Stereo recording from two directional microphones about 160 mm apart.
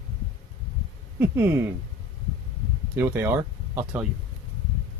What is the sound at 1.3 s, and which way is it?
Speech, 15° right (ahead or behind).